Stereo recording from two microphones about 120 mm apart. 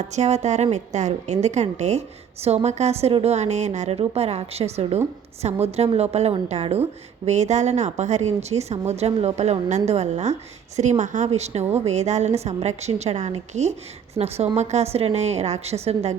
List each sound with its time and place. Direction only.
0.0 s a woman's voice: 70° right (ahead or behind); by 3.3 s 55° right (ahead or behind)
3.3 s a woman's voice: 70° right (ahead or behind)